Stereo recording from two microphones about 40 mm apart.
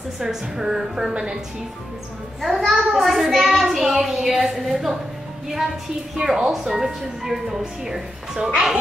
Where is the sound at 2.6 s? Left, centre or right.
Centre.